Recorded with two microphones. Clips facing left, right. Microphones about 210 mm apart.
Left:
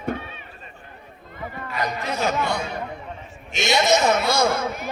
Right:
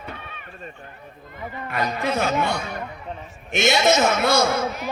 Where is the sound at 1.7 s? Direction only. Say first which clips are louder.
Right 3 dB; 55° right (ahead or behind).